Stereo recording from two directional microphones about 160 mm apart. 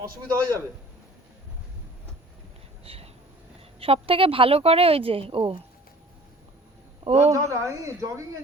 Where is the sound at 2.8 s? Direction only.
35° right (ahead or behind).